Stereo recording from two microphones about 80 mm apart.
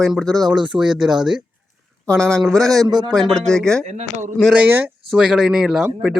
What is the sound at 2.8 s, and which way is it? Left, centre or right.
Speech, right.